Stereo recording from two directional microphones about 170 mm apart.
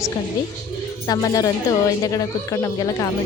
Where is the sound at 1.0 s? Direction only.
20° left (ahead or behind).